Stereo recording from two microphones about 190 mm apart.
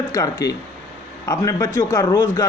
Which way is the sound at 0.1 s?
20° left (ahead or behind).